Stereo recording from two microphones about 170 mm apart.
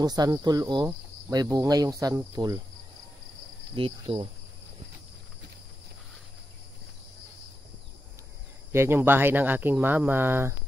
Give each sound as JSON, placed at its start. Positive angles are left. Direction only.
{"t": 0.0, "sound": "speech", "side_deg": -25}
{"t": 3.7, "sound": "speech", "side_deg": -35}
{"t": 8.7, "sound": "speech", "side_deg": -15}